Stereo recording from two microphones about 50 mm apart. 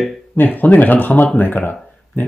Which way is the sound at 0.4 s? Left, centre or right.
Left.